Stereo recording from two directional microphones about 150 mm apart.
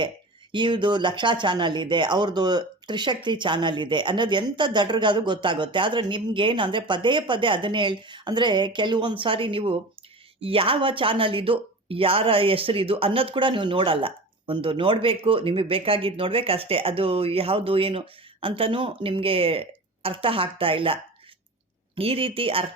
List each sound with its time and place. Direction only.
0.5 s speech: 30° right (ahead or behind)